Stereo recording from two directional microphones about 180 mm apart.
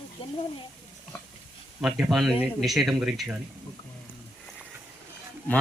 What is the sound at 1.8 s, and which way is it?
Speech, centre (ahead or behind).